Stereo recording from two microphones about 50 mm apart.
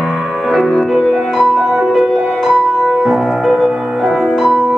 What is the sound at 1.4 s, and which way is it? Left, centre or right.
Music, centre.